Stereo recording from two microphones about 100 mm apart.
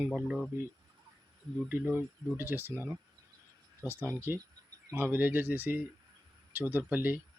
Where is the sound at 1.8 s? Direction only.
15° right (ahead or behind).